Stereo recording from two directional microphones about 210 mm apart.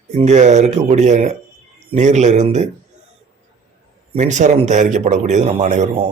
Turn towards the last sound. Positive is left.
turn(degrees=-30)  # may be behind; listen again after turning